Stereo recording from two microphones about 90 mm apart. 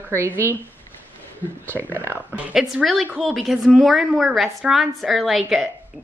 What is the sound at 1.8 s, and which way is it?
Speech, 25° right (ahead or behind).